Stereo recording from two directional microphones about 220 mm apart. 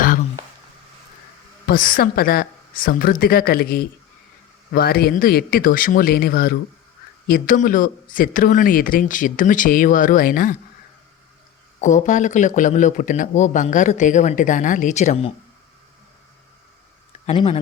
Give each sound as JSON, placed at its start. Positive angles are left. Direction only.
{"t": 1.6, "sound": "speech", "side_deg": 40}
{"t": 11.8, "sound": "speech", "side_deg": 35}
{"t": 17.2, "sound": "speech", "side_deg": 25}